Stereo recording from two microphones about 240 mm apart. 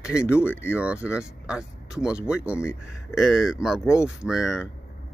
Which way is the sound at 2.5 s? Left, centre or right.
Centre.